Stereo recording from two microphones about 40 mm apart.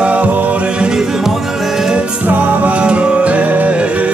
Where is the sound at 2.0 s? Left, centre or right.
Right.